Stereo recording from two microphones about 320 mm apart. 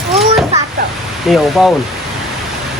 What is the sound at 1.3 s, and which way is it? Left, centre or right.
Speech, centre.